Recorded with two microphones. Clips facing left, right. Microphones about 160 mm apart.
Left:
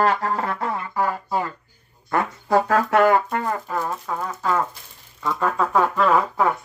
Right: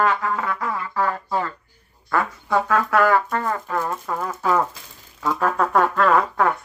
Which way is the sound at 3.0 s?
20° left (ahead or behind).